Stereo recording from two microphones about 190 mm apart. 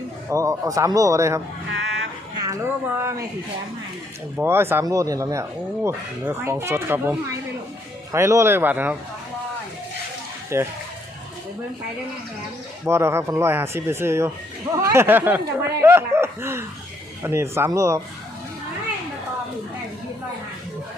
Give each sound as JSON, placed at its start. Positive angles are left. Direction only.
{"t": 0.3, "sound": "speech", "side_deg": -15}
{"t": 2.4, "sound": "speech", "side_deg": -15}
{"t": 4.4, "sound": "speech", "side_deg": -10}
{"t": 10.5, "sound": "speech", "side_deg": -15}
{"t": 12.8, "sound": "speech", "side_deg": -15}